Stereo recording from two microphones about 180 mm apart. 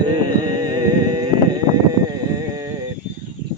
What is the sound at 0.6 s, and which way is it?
Music, 25° right (ahead or behind).